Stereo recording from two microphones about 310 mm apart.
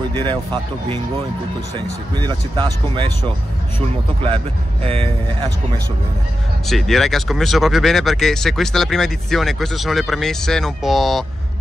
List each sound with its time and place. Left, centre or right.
0.1 s speech: centre
2.1 s speech: centre
4.8 s speech: centre
6.7 s speech: centre